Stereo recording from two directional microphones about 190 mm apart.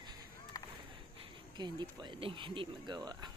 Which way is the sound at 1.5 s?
25° right (ahead or behind).